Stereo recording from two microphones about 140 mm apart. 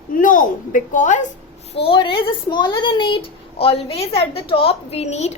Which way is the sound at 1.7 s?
40° left (ahead or behind).